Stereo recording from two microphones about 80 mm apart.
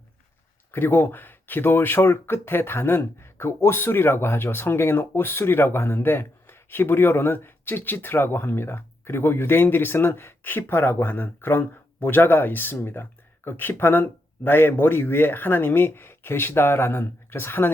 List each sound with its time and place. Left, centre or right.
0.7 s speech: left